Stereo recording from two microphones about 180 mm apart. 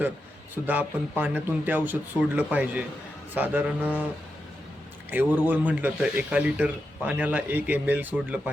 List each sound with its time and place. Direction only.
0.5 s speech: 10° right (ahead or behind)
5.1 s speech: 10° right (ahead or behind)